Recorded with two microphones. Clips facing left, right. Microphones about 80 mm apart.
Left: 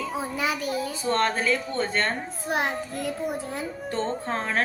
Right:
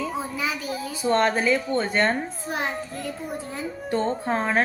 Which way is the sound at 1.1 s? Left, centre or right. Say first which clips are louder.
Right 3 dB; centre.